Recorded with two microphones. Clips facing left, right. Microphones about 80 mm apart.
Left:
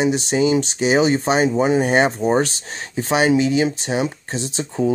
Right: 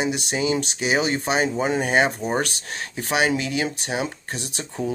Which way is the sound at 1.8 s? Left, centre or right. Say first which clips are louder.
Left 4 dB; left.